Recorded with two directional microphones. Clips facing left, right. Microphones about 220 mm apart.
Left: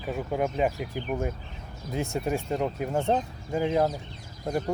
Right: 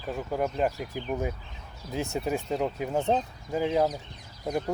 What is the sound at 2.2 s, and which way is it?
Speech, centre (ahead or behind).